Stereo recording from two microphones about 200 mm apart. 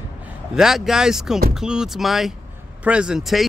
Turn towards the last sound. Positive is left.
turn(degrees=0)  # may be behind; listen again after turning